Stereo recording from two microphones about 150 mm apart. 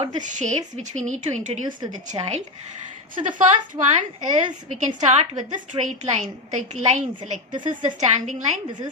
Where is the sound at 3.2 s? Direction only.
60° right (ahead or behind).